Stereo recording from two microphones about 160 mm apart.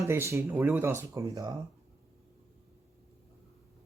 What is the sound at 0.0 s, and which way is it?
Speech, 15° right (ahead or behind).